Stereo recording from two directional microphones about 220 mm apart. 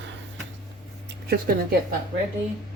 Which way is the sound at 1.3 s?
40° right (ahead or behind).